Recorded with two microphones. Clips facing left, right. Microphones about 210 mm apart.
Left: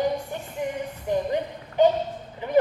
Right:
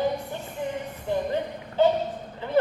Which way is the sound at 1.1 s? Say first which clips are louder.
Left 1 dB; 15° left (ahead or behind).